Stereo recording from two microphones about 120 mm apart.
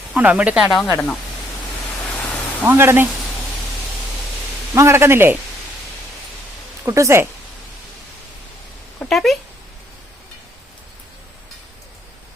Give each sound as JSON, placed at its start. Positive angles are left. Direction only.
{"t": 0.1, "sound": "speech", "side_deg": -10}
{"t": 0.9, "sound": "speech", "side_deg": 10}
{"t": 2.0, "sound": "a sound", "side_deg": 15}
{"t": 2.6, "sound": "speech", "side_deg": -20}
{"t": 4.7, "sound": "a man's voice", "side_deg": -25}
{"t": 6.8, "sound": "a man's voice", "side_deg": -25}
{"t": 9.0, "sound": "speech", "side_deg": 5}